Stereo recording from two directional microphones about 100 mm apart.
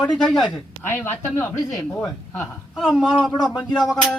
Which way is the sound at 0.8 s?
25° left (ahead or behind).